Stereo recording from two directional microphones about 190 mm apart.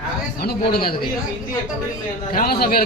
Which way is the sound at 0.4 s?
55° left (ahead or behind).